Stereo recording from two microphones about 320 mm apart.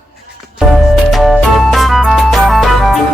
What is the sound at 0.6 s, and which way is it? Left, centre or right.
Music, centre.